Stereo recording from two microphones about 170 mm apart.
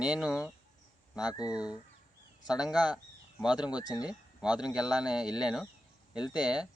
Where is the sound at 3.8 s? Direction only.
25° left (ahead or behind).